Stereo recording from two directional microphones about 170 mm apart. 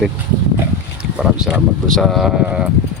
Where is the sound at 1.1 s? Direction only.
Centre (ahead or behind).